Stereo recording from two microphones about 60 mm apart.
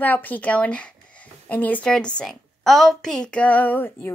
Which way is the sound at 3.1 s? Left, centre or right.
Centre.